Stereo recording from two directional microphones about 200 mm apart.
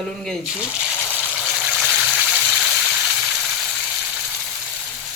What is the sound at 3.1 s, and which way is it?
Frying, centre (ahead or behind).